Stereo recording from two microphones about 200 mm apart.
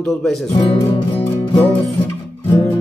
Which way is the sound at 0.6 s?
30° left (ahead or behind).